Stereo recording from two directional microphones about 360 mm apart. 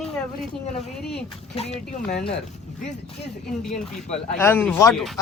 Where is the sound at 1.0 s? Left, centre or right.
Centre.